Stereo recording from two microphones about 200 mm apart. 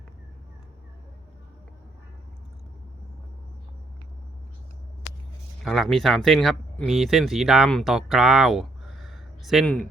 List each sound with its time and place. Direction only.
5.6 s speech: centre (ahead or behind)